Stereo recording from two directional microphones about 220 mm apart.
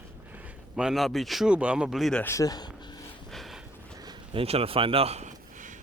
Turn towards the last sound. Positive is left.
turn(degrees=-35)  # may be behind; listen again after turning